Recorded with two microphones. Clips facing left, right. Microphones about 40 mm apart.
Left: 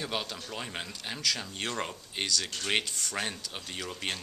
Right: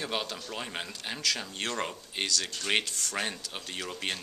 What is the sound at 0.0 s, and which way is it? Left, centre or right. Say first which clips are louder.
Speech: right 1 dB; centre.